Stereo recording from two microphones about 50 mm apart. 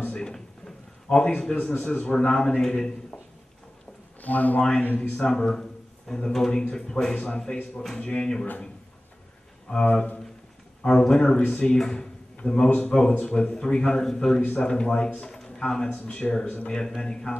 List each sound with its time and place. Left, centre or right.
0.0 s a sound: centre
1.8 s a man's voice: left
4.2 s speech: left
5.1 s a man's voice: centre
8.1 s a man's voice: centre
9.7 s a man's voice: centre
12.6 s a man's voice: left
14.4 s a man's voice: left
15.9 s a man's voice: left
16.6 s speech: centre